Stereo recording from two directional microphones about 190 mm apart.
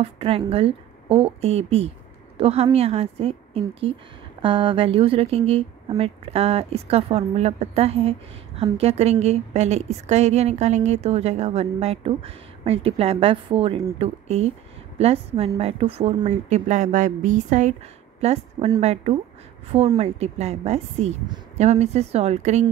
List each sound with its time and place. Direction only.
0.0 s speech: 30° right (ahead or behind)